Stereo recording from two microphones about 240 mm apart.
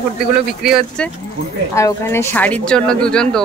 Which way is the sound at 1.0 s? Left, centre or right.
Centre.